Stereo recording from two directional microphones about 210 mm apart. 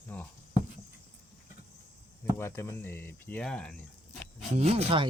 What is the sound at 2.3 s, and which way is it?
Speech, 10° left (ahead or behind).